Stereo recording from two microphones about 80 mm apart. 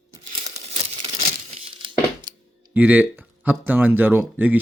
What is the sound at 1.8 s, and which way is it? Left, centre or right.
Tearing, right.